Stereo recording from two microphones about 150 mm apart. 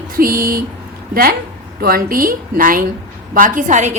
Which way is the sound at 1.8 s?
70° right (ahead or behind).